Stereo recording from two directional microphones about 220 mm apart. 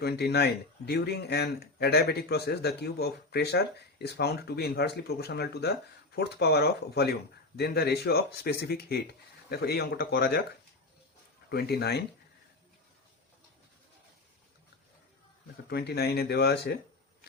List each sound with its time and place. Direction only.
0.0 s speech: 45° left (ahead or behind)
11.4 s speech: 45° left (ahead or behind)
15.7 s speech: 45° left (ahead or behind)